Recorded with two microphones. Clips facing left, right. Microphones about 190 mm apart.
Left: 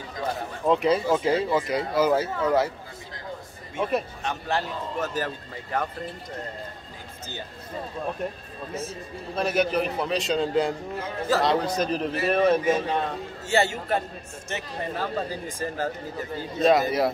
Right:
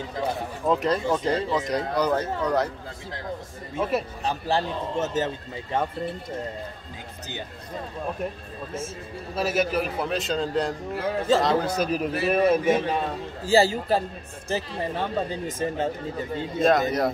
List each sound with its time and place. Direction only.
0.7 s speech: centre (ahead or behind)
3.7 s speech: 5° right (ahead or behind)
4.2 s a man's voice: 30° right (ahead or behind)
9.3 s a man's voice: 5° right (ahead or behind)
13.4 s a man's voice: 30° right (ahead or behind)
16.5 s speech: centre (ahead or behind)